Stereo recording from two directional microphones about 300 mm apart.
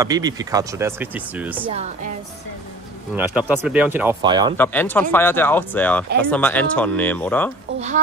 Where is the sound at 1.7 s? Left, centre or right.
Right.